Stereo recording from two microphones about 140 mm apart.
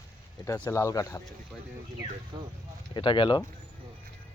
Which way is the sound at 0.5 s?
15° left (ahead or behind).